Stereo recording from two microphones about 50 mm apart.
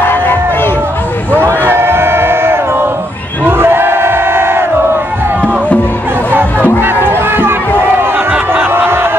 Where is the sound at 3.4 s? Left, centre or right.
Right.